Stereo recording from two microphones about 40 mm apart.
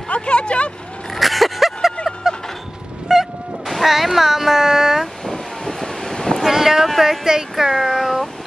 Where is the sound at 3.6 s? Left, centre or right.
Centre.